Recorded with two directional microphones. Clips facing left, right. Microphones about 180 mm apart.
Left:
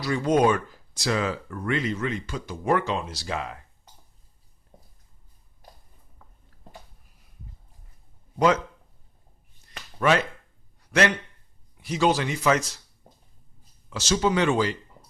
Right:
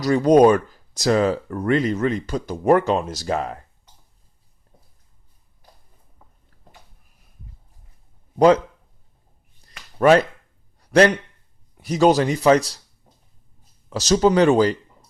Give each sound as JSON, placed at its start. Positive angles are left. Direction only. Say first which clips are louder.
{"t": 0.0, "sound": "speech", "louder": "right 8 dB", "side_deg": -40}
{"t": 10.0, "sound": "speech", "louder": "right 8 dB", "side_deg": -40}
{"t": 11.8, "sound": "speech", "louder": "right 7 dB", "side_deg": -40}
{"t": 13.9, "sound": "speech", "louder": "right 7 dB", "side_deg": -40}